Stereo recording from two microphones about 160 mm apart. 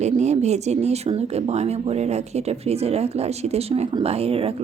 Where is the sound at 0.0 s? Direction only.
45° right (ahead or behind).